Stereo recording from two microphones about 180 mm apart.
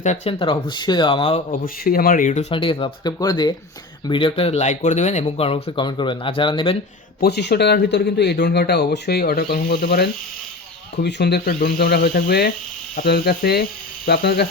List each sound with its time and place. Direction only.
0.0 s speech: 35° left (ahead or behind)
1.6 s speech: 55° left (ahead or behind); by 6.7 s 25° left (ahead or behind)
7.2 s speech: 65° left (ahead or behind)